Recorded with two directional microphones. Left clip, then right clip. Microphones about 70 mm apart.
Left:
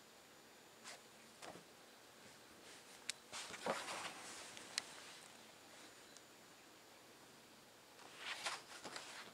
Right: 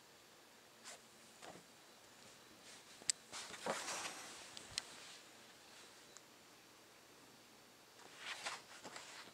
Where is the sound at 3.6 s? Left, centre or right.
Right.